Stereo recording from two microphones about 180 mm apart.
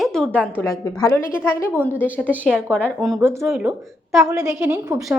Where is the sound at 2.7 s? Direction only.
5° left (ahead or behind).